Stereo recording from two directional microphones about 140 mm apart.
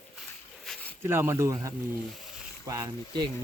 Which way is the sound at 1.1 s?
15° right (ahead or behind).